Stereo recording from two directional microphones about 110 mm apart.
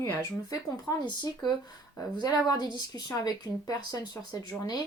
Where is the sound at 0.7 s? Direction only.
40° left (ahead or behind).